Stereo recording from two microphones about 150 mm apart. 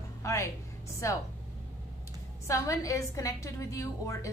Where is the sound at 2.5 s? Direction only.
20° left (ahead or behind).